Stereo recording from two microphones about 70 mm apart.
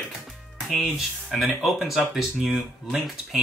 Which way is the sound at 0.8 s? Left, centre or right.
Centre.